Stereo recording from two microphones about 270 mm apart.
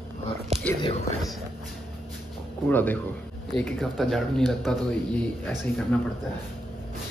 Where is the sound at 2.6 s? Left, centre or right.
Centre.